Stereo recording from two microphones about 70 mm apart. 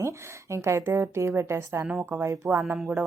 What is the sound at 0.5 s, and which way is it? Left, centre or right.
Speech, right.